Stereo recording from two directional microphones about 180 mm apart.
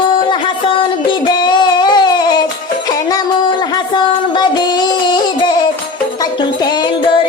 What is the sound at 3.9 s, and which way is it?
Child singing, 25° left (ahead or behind).